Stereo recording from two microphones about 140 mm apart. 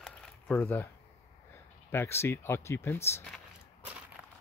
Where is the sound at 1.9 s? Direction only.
20° left (ahead or behind).